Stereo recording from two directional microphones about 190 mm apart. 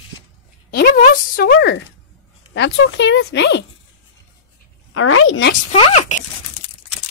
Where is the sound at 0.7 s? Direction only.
55° left (ahead or behind).